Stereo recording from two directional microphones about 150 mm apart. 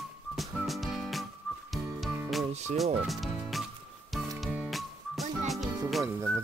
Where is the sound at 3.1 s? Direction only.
Centre (ahead or behind).